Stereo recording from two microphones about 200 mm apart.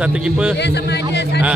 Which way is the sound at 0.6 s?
55° left (ahead or behind).